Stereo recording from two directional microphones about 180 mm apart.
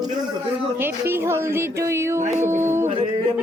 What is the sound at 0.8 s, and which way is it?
Speech, 10° right (ahead or behind).